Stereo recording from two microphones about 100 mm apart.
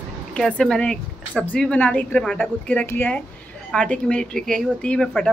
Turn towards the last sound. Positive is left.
turn(degrees=10)  # may be behind; listen again after turning